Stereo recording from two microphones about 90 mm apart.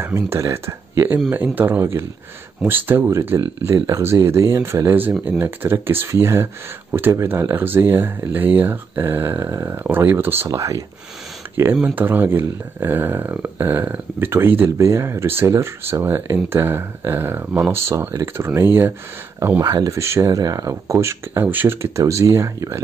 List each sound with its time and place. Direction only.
0.0 s speech: 30° right (ahead or behind)
3.2 s speech: 30° right (ahead or behind)
9.5 s speech: 35° right (ahead or behind)
9.8 s speech: 25° right (ahead or behind)
10.5 s speech: 35° right (ahead or behind)
11.5 s speech: 25° right (ahead or behind)
19.6 s speech: 40° right (ahead or behind)